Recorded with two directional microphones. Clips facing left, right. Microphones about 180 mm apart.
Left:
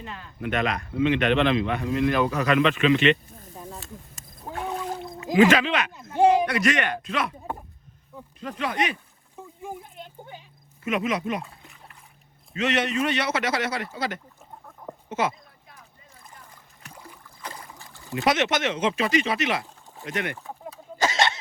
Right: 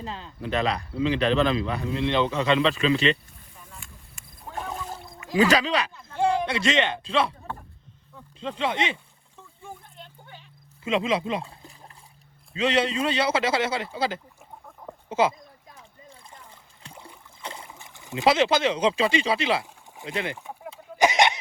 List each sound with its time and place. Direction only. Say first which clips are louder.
0.0 s a man's voice: even; 30° right (ahead or behind)
3.3 s snake: left 9 dB; 40° left (ahead or behind)
5.5 s a man's voice: left 1 dB; 35° right (ahead or behind)
6.1 s a sound: left 6 dB; 15° left (ahead or behind)
6.4 s speech: even; 25° right (ahead or behind)
8.4 s speech: right 1 dB; 25° right (ahead or behind)
9.6 s a sound: left 5 dB; 15° left (ahead or behind)
10.8 s speech: right 1 dB; 25° right (ahead or behind)
16.0 s splash: right 1 dB; 30° right (ahead or behind)
17.0 s boat: right 1 dB; 25° right (ahead or behind)
18.3 s speech: right 3 dB; 30° right (ahead or behind)
19.6 s speech: even; 15° right (ahead or behind)
21.0 s a sound: right 4 dB; 15° right (ahead or behind)